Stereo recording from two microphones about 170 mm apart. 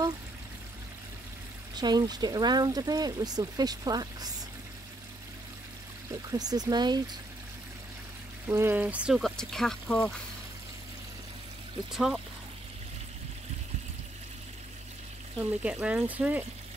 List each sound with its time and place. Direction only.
1.8 s speech: 25° right (ahead or behind)
6.3 s speech: 25° right (ahead or behind)
8.5 s speech: 15° right (ahead or behind); by 10.1 s 5° left (ahead or behind)
11.9 s speech: centre (ahead or behind)
15.6 s speech: 10° right (ahead or behind)